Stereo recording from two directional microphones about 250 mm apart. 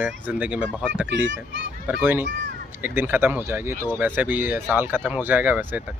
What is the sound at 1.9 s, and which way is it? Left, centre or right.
Speech, centre.